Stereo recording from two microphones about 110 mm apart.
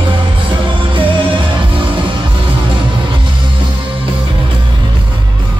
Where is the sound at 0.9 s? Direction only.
50° right (ahead or behind).